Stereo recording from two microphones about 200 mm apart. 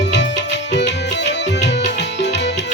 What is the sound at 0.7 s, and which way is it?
Music, 60° left (ahead or behind).